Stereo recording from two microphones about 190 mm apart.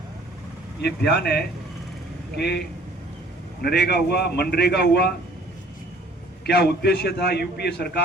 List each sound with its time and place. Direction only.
0.8 s a man's voice: 60° left (ahead or behind)
3.6 s a man's voice: 55° left (ahead or behind)
6.4 s a man's voice: 60° left (ahead or behind)